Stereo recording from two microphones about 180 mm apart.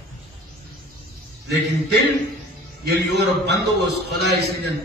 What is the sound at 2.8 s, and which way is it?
A man's voice, 70° right (ahead or behind).